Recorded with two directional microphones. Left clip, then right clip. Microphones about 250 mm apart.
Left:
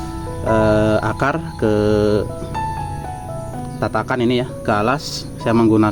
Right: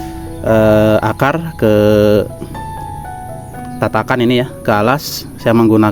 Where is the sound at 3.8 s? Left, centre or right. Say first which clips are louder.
Right 5 dB; right.